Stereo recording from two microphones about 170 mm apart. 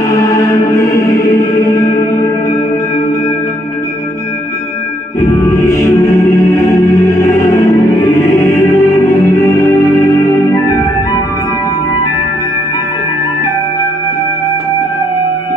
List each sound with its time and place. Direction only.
0.1 s music: 20° left (ahead or behind)
5.2 s music: 20° left (ahead or behind)